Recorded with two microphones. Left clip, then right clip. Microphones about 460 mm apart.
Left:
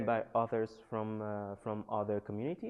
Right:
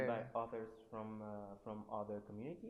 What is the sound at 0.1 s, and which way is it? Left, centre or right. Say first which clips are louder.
Speech: left 10 dB; left.